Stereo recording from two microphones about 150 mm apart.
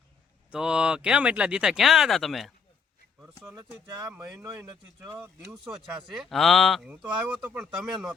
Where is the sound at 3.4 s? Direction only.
20° right (ahead or behind).